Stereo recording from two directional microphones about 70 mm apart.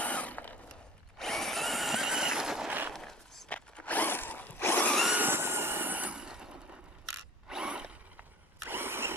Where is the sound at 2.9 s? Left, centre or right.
Centre.